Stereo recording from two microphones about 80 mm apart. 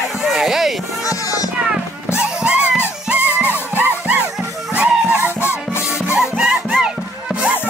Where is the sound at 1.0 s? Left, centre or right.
Left.